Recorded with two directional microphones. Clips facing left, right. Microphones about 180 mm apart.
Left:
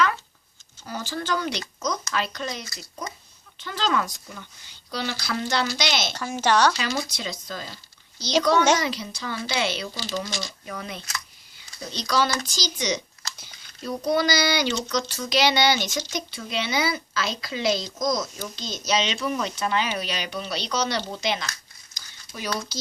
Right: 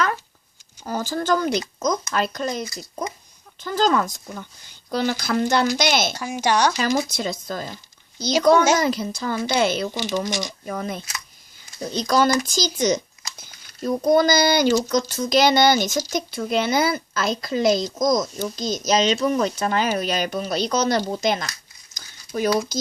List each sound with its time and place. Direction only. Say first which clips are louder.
0.9 s speech: right 6 dB; 45° right (ahead or behind)
6.1 s speech: right 1 dB; 15° right (ahead or behind)
6.7 s speech: right 7 dB; 45° right (ahead or behind)
9.9 s speech: right 6 dB; 20° right (ahead or behind)
10.7 s speech: right 7 dB; 45° right (ahead or behind)
21.9 s a sound: right 12 dB; 50° right (ahead or behind)